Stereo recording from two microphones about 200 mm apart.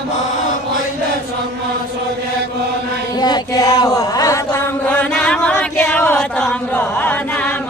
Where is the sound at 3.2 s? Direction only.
20° left (ahead or behind).